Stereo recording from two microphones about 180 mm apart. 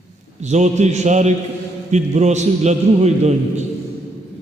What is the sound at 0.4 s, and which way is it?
A man's voice, 40° right (ahead or behind).